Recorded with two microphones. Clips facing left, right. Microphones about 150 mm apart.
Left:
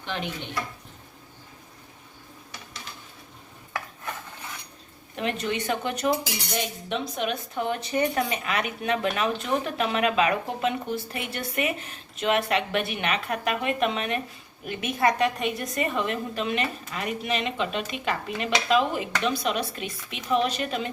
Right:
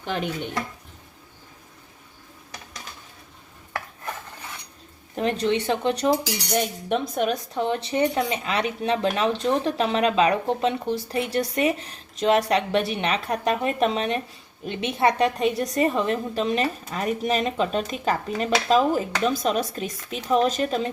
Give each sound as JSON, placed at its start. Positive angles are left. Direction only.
{"t": 0.0, "sound": "speech", "side_deg": -40}
{"t": 5.1, "sound": "speech", "side_deg": -35}
{"t": 6.5, "sound": "speech", "side_deg": -50}